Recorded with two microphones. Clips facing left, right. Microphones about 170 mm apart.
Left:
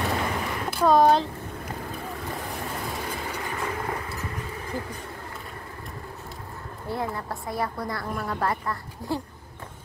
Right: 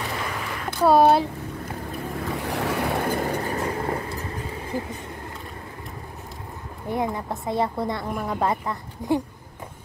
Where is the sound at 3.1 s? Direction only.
45° right (ahead or behind); by 4.2 s 30° right (ahead or behind).